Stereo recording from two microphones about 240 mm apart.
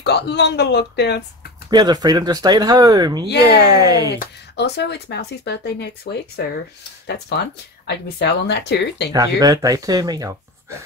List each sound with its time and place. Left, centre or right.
0.0 s speech: left
1.7 s speech: centre
4.1 s speech: left
7.8 s speech: left
9.1 s speech: centre